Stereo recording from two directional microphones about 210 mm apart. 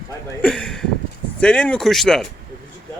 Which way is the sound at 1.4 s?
5° left (ahead or behind).